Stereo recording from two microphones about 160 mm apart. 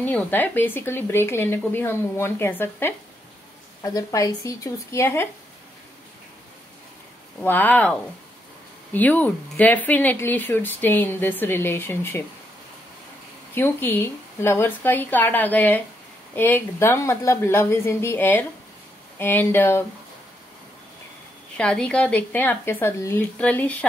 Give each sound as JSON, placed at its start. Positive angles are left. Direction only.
{"t": 0.0, "sound": "speech", "side_deg": 10}
{"t": 7.3, "sound": "speech", "side_deg": 10}
{"t": 13.6, "sound": "speech", "side_deg": 15}
{"t": 21.5, "sound": "speech", "side_deg": 5}